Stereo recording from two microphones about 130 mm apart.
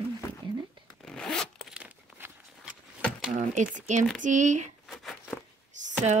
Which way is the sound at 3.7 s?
65° right (ahead or behind).